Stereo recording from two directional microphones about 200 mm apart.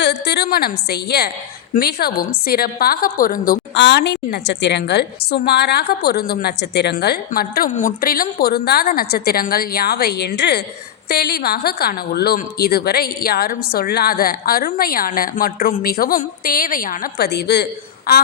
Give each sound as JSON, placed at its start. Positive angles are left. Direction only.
{"t": 0.0, "sound": "a woman's voice", "side_deg": 55}